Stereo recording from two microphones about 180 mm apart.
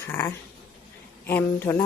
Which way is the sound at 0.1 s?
15° left (ahead or behind).